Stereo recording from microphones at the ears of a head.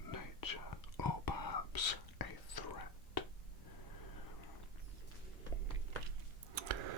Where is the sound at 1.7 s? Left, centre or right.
Left.